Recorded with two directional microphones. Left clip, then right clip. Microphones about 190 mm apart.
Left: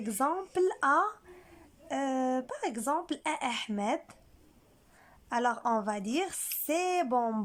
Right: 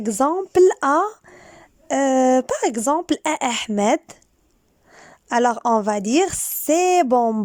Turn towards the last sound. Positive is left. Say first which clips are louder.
# right 13 dB
turn(degrees=-40)  # may be behind; listen again after turning